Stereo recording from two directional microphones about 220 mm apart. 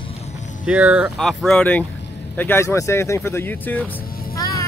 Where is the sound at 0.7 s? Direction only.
5° right (ahead or behind).